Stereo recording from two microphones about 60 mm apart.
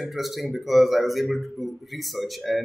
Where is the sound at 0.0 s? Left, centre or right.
Centre.